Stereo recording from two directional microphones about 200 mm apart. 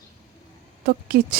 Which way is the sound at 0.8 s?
50° right (ahead or behind).